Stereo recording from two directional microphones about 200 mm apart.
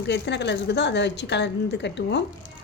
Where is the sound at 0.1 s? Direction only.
60° left (ahead or behind).